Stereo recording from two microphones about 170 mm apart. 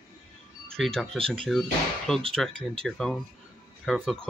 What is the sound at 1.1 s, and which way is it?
Speech, 35° right (ahead or behind).